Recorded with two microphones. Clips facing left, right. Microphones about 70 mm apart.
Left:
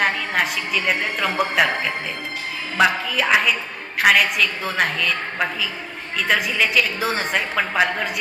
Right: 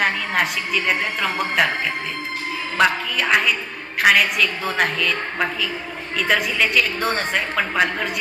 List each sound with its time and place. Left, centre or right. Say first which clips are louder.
0.0 s a woman's voice: even; centre
2.7 s a woman's voice: left 1 dB; centre